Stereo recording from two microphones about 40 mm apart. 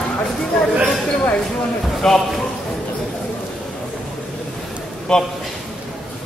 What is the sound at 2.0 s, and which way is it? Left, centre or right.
Speech, centre.